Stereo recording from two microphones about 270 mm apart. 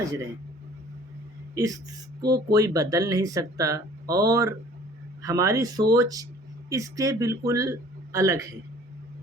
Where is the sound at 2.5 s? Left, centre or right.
Centre.